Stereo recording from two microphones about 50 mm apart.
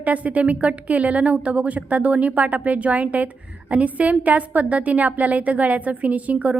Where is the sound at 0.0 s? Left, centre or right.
Right.